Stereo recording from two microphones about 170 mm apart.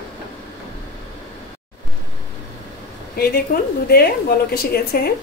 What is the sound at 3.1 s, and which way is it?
A woman's voice, 65° left (ahead or behind).